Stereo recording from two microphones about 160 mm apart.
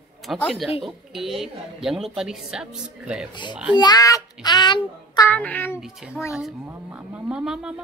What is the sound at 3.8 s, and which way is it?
Child singing, 25° left (ahead or behind).